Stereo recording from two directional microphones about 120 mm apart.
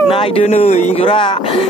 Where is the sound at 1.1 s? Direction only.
45° left (ahead or behind).